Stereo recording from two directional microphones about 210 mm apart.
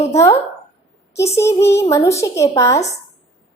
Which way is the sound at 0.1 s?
15° left (ahead or behind).